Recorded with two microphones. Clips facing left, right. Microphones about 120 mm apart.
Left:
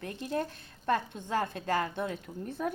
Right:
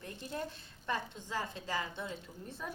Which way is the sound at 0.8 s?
50° left (ahead or behind).